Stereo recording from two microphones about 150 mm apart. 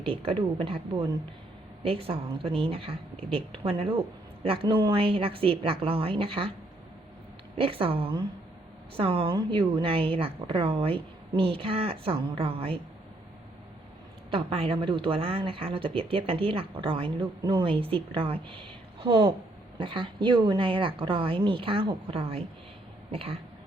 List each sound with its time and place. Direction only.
0.0 s speech: 35° right (ahead or behind)
7.5 s speech: 40° right (ahead or behind)
14.3 s speech: 35° right (ahead or behind)